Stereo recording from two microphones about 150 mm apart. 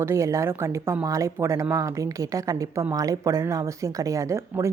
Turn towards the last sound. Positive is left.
turn(degrees=-20)  # may be behind; listen again after turning